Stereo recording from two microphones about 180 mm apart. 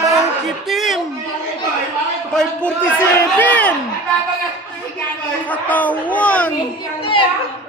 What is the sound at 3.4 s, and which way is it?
Speech, 10° left (ahead or behind).